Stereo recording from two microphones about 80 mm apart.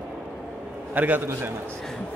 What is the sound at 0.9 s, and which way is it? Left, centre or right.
Speech, right.